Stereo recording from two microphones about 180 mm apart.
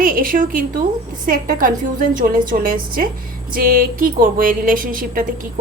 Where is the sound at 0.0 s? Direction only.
50° right (ahead or behind).